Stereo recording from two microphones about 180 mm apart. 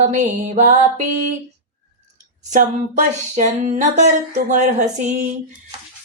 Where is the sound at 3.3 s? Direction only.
45° right (ahead or behind).